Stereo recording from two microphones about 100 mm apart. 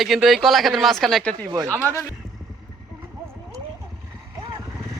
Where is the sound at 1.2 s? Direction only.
10° left (ahead or behind).